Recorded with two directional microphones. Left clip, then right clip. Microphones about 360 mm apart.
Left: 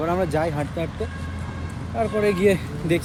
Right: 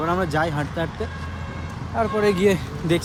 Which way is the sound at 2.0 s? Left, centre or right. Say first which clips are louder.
Right 1 dB; centre.